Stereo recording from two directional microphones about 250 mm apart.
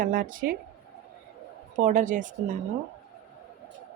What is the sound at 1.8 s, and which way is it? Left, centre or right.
Speech, right.